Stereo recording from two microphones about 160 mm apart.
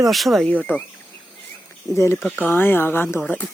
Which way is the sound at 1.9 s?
15° left (ahead or behind).